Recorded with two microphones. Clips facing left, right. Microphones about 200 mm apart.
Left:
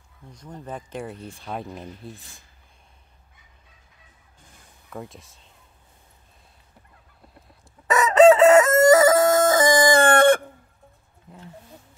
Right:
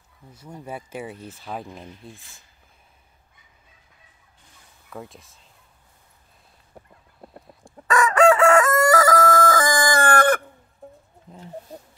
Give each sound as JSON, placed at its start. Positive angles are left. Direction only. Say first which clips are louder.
{"t": 0.3, "sound": "speech", "louder": "even", "side_deg": -10}
{"t": 4.8, "sound": "speech", "louder": "left 1 dB", "side_deg": 0}
{"t": 7.8, "sound": "chicken", "louder": "left 3 dB", "side_deg": 20}
{"t": 11.7, "sound": "music", "louder": "right 7 dB", "side_deg": -35}